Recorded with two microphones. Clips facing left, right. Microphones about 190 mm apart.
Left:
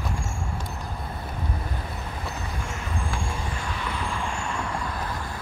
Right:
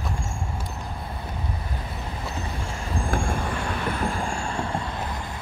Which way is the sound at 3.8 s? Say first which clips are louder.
Right 5 dB; 50° right (ahead or behind).